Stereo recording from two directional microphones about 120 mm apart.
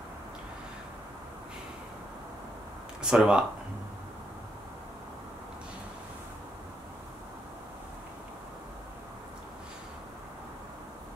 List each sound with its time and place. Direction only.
3.0 s speech: 5° right (ahead or behind)